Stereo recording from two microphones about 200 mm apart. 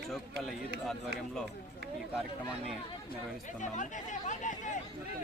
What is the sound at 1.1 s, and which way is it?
Speech, 55° right (ahead or behind).